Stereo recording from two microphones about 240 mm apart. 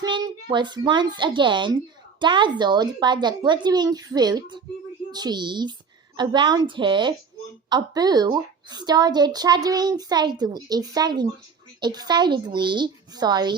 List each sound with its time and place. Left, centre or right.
0.4 s a woman's voice: centre